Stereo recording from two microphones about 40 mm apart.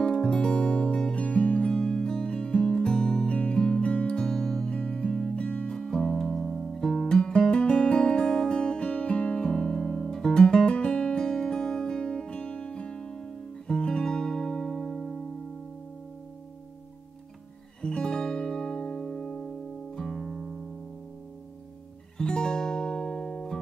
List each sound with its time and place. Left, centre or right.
0.0 s music: centre
1.7 s music: centre
3.8 s music: left
5.8 s music: centre
8.5 s music: left
9.6 s guitar: centre
17.8 s music: left; by 20.5 s centre
22.2 s music: left